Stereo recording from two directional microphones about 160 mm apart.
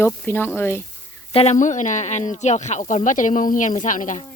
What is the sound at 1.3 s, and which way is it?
Speech, 40° left (ahead or behind).